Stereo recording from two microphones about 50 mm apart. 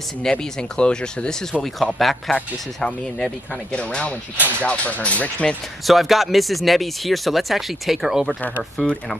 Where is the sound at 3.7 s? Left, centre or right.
Left.